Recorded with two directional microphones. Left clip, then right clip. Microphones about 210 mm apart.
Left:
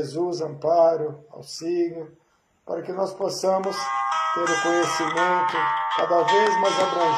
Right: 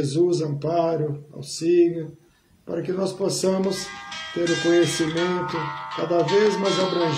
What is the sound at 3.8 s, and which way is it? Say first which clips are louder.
Music: left 10 dB; 60° left (ahead or behind).